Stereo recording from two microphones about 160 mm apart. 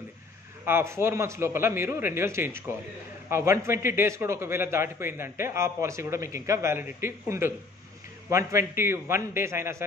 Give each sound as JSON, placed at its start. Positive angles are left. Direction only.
{"t": 0.7, "sound": "a man's voice", "side_deg": -15}